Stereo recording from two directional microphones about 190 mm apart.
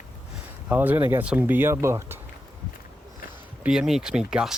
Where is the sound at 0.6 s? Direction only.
10° right (ahead or behind).